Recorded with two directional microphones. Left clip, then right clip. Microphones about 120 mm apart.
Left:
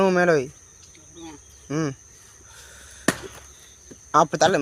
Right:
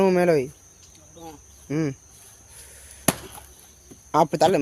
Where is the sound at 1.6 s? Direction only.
35° right (ahead or behind).